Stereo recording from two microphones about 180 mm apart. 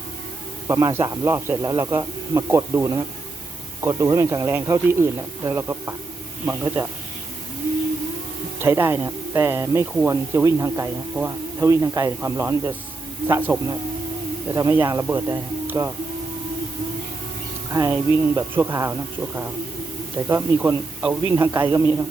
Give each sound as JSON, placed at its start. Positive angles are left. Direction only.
{"t": 0.7, "sound": "speech", "side_deg": -15}
{"t": 8.5, "sound": "speech", "side_deg": -15}
{"t": 17.7, "sound": "speech", "side_deg": -15}
{"t": 20.1, "sound": "speech", "side_deg": -15}